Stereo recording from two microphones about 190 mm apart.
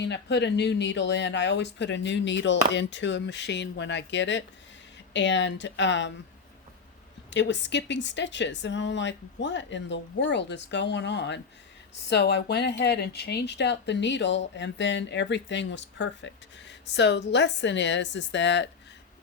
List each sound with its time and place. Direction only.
0.0 s speech: 65° left (ahead or behind)
7.3 s speech: 70° left (ahead or behind)